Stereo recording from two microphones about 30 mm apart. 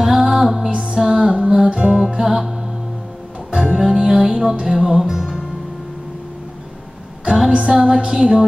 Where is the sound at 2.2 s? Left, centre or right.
Centre.